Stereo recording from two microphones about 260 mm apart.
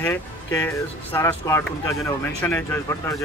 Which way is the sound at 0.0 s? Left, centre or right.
Centre.